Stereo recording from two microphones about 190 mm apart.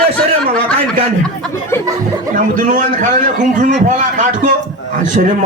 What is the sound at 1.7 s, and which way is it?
Speech, 10° left (ahead or behind).